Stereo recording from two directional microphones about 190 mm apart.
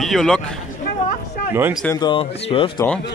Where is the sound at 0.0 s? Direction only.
Centre (ahead or behind).